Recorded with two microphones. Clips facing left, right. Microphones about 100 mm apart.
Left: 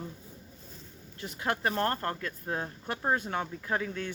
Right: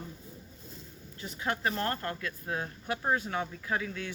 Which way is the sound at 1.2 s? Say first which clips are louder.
Left 2 dB; 50° left (ahead or behind).